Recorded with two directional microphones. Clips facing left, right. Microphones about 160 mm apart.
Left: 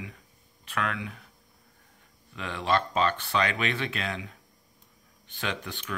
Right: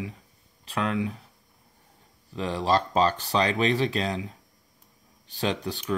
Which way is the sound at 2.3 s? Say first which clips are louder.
Right 3 dB; 35° right (ahead or behind).